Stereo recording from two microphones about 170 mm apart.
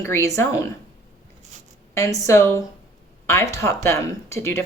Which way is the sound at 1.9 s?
20° left (ahead or behind).